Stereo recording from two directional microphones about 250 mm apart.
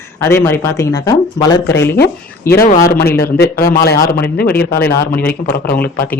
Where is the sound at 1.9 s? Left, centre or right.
Left.